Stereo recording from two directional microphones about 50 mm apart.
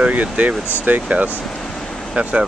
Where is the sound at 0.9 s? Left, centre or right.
Right.